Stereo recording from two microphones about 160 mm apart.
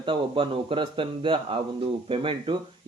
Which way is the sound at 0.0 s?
35° right (ahead or behind).